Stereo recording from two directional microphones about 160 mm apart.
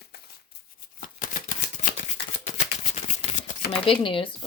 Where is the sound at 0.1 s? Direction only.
75° left (ahead or behind).